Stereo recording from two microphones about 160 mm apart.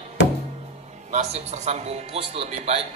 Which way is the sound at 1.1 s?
45° right (ahead or behind).